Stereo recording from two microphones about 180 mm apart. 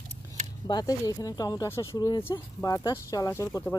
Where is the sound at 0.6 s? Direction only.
20° left (ahead or behind).